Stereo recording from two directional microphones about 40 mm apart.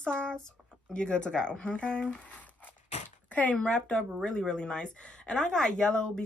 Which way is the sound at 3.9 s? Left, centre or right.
Centre.